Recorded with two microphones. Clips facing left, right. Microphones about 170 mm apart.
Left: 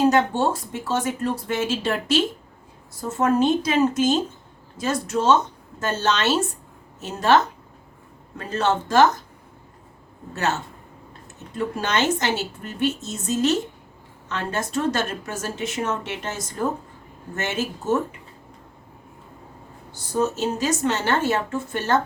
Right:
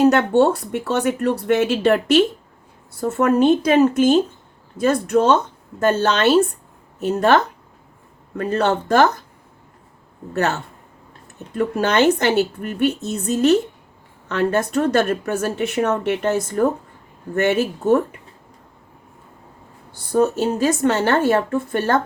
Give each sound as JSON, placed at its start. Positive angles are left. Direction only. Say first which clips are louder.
{"t": 0.1, "sound": "speech", "louder": "right 5 dB", "side_deg": -65}
{"t": 11.5, "sound": "speech", "louder": "right 6 dB", "side_deg": -55}
{"t": 20.1, "sound": "speech", "louder": "right 5 dB", "side_deg": -55}